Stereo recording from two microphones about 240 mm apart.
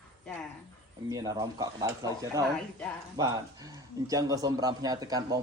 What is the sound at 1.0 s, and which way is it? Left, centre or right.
A man's voice, centre.